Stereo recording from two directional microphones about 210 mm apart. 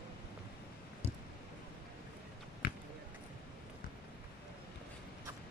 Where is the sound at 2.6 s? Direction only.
45° left (ahead or behind).